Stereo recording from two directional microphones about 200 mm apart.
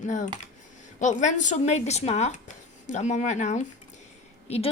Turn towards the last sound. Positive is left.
turn(degrees=30)  # may be behind; listen again after turning